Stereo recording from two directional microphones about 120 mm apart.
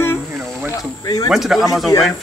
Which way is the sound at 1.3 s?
5° right (ahead or behind).